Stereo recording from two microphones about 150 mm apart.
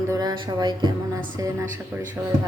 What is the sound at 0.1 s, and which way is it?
A woman's voice, 25° right (ahead or behind).